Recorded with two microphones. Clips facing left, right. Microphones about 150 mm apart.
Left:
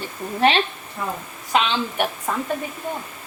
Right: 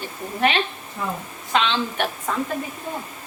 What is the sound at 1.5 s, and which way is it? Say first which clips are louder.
Speech: left 1 dB; 10° left (ahead or behind).